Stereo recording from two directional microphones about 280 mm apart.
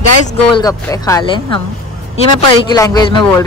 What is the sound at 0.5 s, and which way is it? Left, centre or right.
A woman's voice, centre.